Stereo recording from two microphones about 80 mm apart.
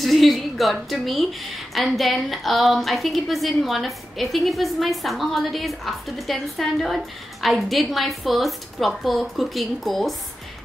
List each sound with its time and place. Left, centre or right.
0.0 s a woman's voice: centre